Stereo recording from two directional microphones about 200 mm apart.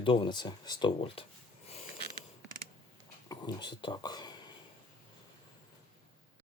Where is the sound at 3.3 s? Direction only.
20° left (ahead or behind).